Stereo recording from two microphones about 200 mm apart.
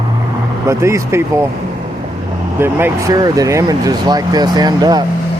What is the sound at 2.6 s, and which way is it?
Speech, 15° right (ahead or behind).